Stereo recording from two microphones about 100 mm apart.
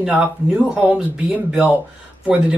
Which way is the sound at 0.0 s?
15° right (ahead or behind).